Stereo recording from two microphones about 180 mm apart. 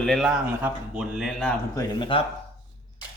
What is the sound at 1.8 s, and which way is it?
Speech, 25° left (ahead or behind).